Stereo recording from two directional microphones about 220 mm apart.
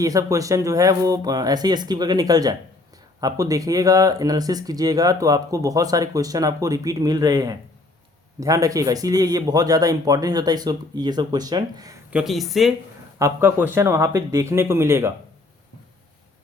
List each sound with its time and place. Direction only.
0.0 s speech: 15° right (ahead or behind)
12.1 s speech: centre (ahead or behind)
13.1 s speech: 10° right (ahead or behind)